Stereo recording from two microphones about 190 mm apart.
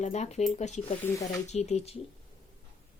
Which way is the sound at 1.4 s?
35° left (ahead or behind).